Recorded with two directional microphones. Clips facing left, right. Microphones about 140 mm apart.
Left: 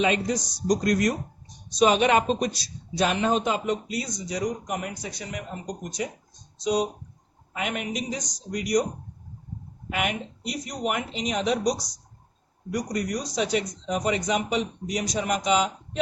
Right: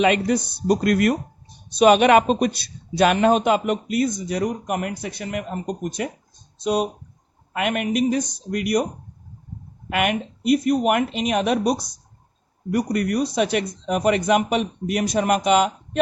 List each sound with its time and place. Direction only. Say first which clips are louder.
0.0 s speech: right 5 dB; 65° right (ahead or behind)
9.9 s speech: right 6 dB; 60° right (ahead or behind)